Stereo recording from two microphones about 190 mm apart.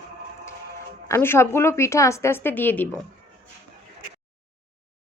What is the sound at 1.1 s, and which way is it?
Speech, 15° left (ahead or behind).